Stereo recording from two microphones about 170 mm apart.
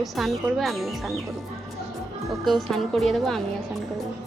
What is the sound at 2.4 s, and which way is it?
Speech, centre (ahead or behind).